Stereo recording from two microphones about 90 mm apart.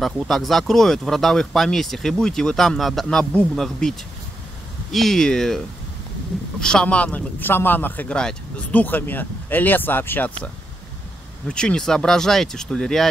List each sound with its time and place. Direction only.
0.0 s speech: centre (ahead or behind)
4.9 s speech: 5° left (ahead or behind)
6.6 s speech: 10° left (ahead or behind)
8.2 s speech: 10° left (ahead or behind)
8.8 s speech: 20° left (ahead or behind)
11.4 s speech: 10° left (ahead or behind)